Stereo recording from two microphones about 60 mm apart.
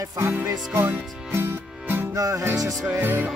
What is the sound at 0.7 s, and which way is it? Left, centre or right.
Speech, right.